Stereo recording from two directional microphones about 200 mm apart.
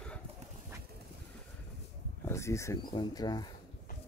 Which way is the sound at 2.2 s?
15° left (ahead or behind).